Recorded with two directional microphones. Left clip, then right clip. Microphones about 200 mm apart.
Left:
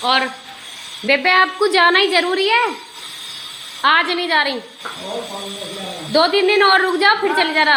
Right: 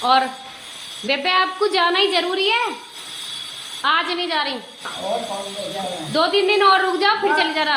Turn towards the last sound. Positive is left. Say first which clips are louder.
# left 3 dB
turn(degrees=20)  # may be behind; listen again after turning